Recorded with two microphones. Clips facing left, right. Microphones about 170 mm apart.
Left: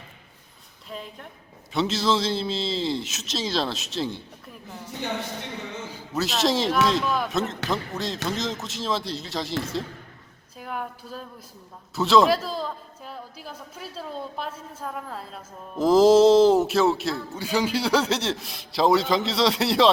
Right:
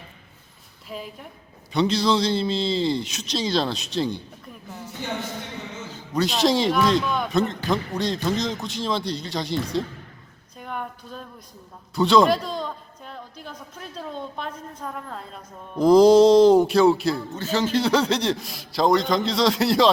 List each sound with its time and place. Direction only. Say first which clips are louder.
0.9 s a woman's voice: right 2 dB; 5° right (ahead or behind)
5.9 s a woman's voice: right 4 dB; centre (ahead or behind)
10.6 s a woman's voice: even; 5° left (ahead or behind)